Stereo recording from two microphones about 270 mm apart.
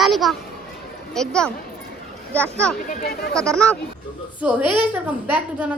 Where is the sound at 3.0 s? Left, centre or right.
Left.